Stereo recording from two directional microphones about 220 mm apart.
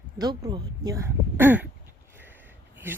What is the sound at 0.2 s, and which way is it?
Speech, 20° right (ahead or behind).